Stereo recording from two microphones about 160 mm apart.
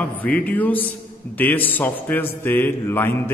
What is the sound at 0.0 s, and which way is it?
A man's voice, 10° left (ahead or behind).